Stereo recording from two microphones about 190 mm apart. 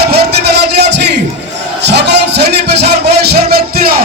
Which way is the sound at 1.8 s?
65° right (ahead or behind).